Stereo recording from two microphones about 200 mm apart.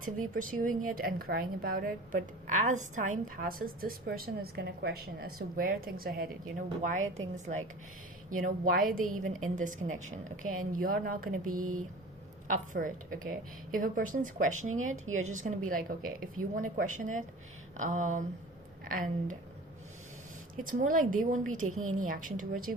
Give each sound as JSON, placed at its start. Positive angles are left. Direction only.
{"t": 0.0, "sound": "a woman's voice", "side_deg": -40}
{"t": 11.6, "sound": "speech", "side_deg": -90}
{"t": 12.5, "sound": "a woman's voice", "side_deg": -40}
{"t": 14.9, "sound": "speech", "side_deg": -90}
{"t": 15.2, "sound": "a woman's voice", "side_deg": -40}
{"t": 20.7, "sound": "a woman's voice", "side_deg": -40}
{"t": 21.7, "sound": "speech", "side_deg": -90}
{"t": 21.9, "sound": "a woman's voice", "side_deg": -40}